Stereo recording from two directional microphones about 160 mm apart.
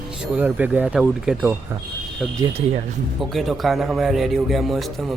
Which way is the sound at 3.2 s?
Centre (ahead or behind).